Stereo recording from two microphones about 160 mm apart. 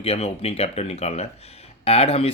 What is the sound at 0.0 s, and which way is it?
A man's voice, 40° left (ahead or behind).